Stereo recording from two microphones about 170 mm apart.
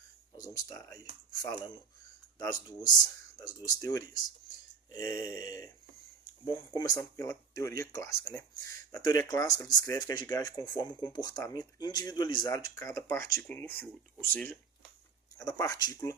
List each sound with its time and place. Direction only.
0.3 s speech: 20° left (ahead or behind)